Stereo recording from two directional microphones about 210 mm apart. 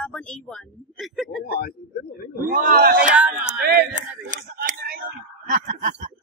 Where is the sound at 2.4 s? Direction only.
40° right (ahead or behind).